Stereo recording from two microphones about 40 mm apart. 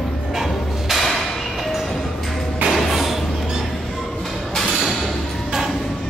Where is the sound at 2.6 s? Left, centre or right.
Centre.